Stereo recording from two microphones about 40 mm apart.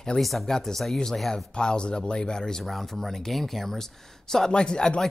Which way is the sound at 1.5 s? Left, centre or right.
Left.